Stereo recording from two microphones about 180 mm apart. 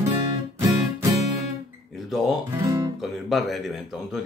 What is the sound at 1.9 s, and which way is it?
Speech, centre (ahead or behind).